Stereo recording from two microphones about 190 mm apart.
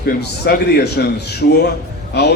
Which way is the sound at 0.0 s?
55° left (ahead or behind).